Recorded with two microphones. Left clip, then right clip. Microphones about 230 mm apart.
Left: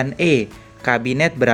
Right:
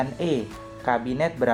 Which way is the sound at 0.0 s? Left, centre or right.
Left.